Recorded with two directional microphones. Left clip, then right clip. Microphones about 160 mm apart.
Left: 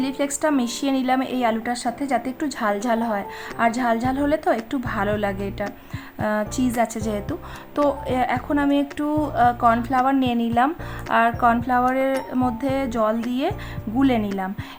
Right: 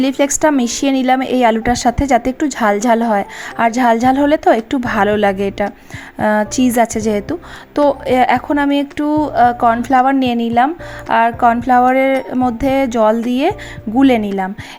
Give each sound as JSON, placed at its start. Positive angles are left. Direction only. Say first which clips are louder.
{"t": 0.0, "sound": "speech", "louder": "right 9 dB", "side_deg": -35}